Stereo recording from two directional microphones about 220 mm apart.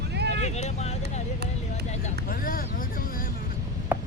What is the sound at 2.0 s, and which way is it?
Vehicle, 40° left (ahead or behind).